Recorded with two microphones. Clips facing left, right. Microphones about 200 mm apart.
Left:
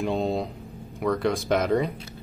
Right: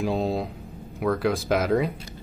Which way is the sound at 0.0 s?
Centre (ahead or behind).